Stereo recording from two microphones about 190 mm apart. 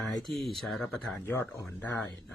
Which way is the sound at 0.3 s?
Centre (ahead or behind).